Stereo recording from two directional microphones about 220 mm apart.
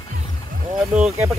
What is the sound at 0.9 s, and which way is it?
Speech, 5° right (ahead or behind).